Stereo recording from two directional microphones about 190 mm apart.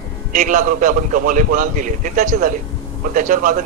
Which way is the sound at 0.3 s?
45° right (ahead or behind).